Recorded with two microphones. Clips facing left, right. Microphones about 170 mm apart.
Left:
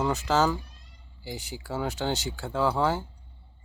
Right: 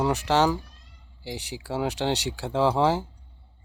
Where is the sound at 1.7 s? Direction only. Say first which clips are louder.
Right 3 dB; 15° right (ahead or behind).